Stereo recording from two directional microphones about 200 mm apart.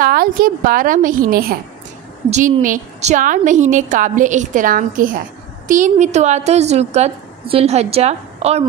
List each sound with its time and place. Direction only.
0.0 s a woman's voice: 45° right (ahead or behind)
2.2 s a woman's voice: 35° right (ahead or behind)